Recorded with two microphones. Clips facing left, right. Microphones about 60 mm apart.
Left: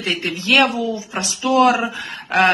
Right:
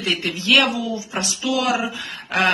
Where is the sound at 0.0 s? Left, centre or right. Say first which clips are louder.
Left 1 dB; left.